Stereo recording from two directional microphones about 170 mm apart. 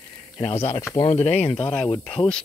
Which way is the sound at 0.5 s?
15° left (ahead or behind).